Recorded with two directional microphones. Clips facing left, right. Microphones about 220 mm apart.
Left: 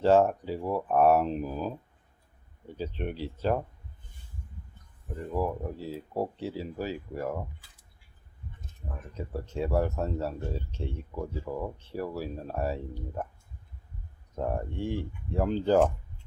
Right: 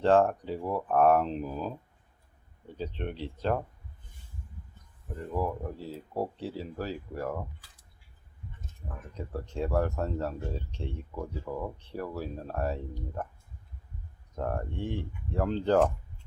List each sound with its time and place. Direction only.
0.0 s speech: 5° left (ahead or behind)
5.3 s speech: 5° left (ahead or behind)
9.1 s speech: 5° left (ahead or behind)
14.3 s speech: 10° left (ahead or behind)